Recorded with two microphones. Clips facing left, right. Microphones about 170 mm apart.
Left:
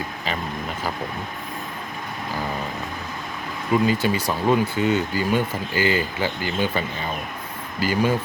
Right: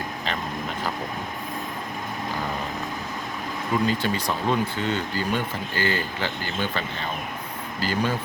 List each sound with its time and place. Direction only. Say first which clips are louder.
3.7 s speech: left 4 dB; 10° left (ahead or behind)